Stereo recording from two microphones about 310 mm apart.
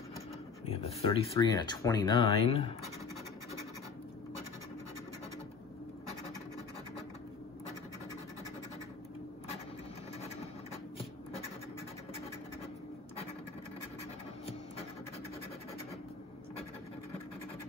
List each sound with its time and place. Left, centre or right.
0.7 s speech: centre